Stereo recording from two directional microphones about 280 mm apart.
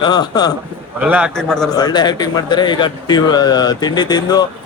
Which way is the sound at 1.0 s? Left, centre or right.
Centre.